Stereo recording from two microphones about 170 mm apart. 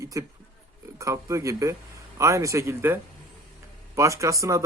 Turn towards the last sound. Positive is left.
turn(degrees=-20)  # may be behind; listen again after turning